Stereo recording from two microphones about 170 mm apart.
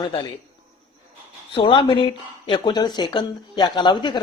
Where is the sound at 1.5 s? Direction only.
30° left (ahead or behind).